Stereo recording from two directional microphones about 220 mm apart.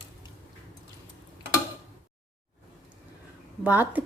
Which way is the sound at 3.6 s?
5° right (ahead or behind).